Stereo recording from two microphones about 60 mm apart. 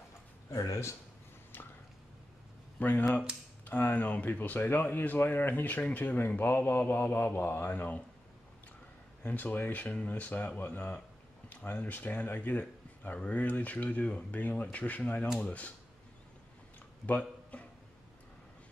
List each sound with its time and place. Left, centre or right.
0.5 s speech: left
2.8 s speech: left
9.2 s speech: left
17.0 s a sound: left